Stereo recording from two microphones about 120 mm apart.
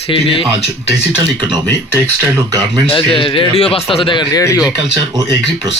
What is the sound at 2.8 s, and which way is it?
Speech, 50° left (ahead or behind).